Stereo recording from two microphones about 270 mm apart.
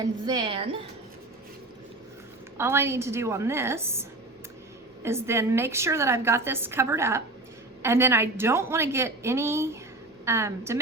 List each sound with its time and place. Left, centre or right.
0.0 s a woman's voice: centre
2.6 s a woman's voice: centre
5.0 s a woman's voice: centre